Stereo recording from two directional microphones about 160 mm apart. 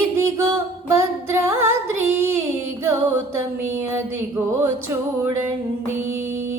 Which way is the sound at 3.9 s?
15° right (ahead or behind).